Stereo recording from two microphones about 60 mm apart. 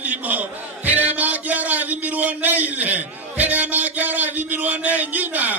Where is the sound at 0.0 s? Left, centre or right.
Right.